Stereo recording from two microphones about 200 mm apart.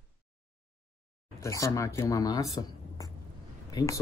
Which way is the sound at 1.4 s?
15° left (ahead or behind).